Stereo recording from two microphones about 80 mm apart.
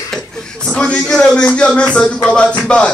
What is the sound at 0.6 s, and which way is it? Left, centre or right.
A man's voice, centre.